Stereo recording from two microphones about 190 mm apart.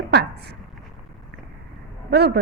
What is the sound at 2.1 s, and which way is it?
Speech, 65° right (ahead or behind).